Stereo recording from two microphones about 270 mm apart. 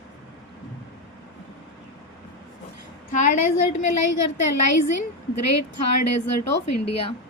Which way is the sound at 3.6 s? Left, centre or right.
Left.